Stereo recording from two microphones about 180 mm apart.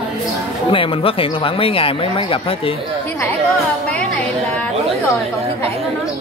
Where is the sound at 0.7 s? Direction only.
30° left (ahead or behind).